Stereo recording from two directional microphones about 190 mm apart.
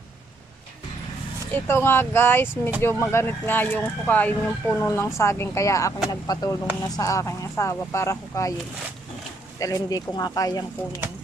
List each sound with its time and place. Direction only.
1.5 s speech: 10° left (ahead or behind)
9.6 s speech: 20° left (ahead or behind)